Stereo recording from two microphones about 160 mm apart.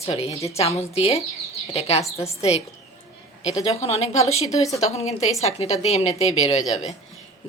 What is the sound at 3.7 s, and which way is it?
A woman's voice, 40° left (ahead or behind).